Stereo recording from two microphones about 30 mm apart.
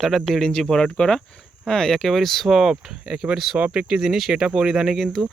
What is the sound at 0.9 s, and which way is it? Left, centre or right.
Speech, left.